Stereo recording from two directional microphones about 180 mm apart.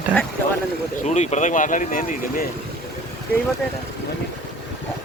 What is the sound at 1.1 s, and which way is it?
Speech, 40° left (ahead or behind).